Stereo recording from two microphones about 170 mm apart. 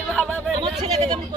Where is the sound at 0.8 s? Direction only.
40° right (ahead or behind).